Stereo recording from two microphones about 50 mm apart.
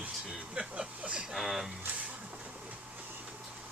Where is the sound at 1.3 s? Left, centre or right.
Centre.